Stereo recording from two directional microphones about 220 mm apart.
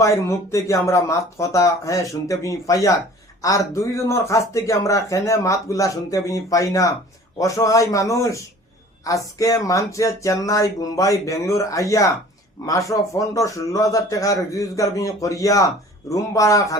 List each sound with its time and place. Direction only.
0.0 s speech: 15° left (ahead or behind)